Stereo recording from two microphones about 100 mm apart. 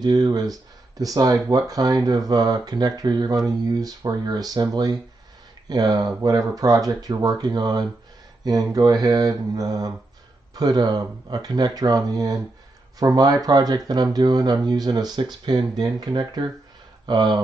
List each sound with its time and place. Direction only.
0.0 s speech: 45° right (ahead or behind)